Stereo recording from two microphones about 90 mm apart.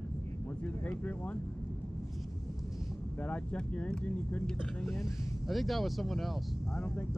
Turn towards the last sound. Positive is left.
turn(degrees=25)  # may be behind; listen again after turning